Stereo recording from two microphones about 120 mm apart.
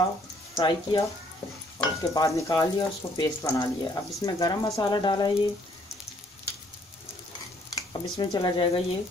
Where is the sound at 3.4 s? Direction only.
30° left (ahead or behind).